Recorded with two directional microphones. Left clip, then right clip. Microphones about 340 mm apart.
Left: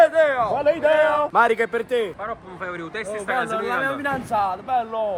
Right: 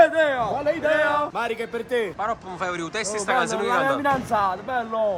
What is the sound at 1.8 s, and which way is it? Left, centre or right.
Speech, centre.